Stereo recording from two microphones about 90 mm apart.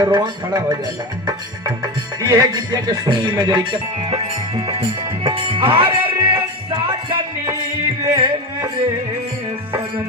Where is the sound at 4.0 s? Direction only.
80° right.